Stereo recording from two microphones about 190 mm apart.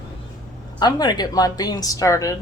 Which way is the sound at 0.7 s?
20° left (ahead or behind).